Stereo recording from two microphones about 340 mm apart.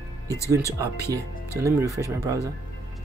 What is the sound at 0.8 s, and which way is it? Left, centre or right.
Speech, centre.